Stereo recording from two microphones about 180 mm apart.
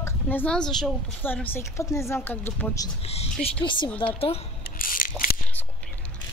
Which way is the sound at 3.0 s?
35° left (ahead or behind).